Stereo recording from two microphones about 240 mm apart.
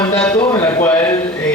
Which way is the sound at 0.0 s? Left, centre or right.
Centre.